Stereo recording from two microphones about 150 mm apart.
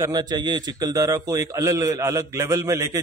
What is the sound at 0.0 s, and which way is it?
A man's voice, 25° right (ahead or behind).